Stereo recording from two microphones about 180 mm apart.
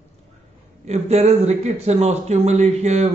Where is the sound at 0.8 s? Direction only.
35° right (ahead or behind).